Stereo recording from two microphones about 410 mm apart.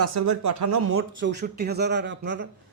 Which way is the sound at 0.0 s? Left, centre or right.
Right.